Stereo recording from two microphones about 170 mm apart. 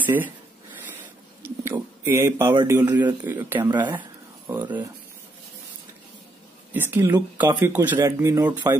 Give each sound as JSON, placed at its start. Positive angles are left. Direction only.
{"t": 0.0, "sound": "speech", "side_deg": -10}
{"t": 1.4, "sound": "speech", "side_deg": -15}
{"t": 6.7, "sound": "speech", "side_deg": -15}